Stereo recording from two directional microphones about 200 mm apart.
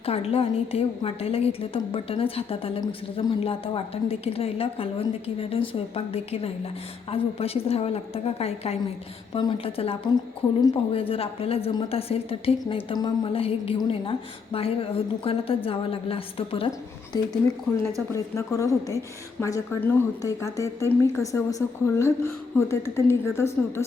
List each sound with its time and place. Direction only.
0.0 s a woman's voice: 30° left (ahead or behind)
18.1 s a woman's voice: 15° left (ahead or behind)